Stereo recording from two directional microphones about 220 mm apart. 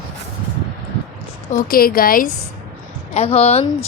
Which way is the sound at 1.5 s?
40° left (ahead or behind).